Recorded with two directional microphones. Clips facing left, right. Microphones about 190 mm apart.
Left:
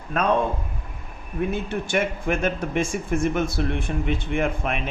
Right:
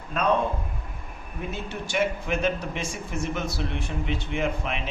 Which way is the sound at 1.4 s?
55° left (ahead or behind).